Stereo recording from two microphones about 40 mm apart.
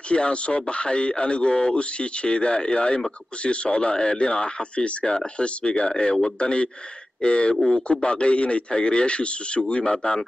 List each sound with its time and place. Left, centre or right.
0.1 s a man's voice: left
7.5 s a man's voice: centre
7.9 s a man's voice: left